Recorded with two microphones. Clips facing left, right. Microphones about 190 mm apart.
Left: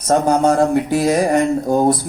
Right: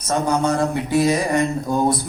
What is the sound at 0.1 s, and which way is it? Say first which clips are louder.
A man's voice: left 5 dB; 45° left (ahead or behind).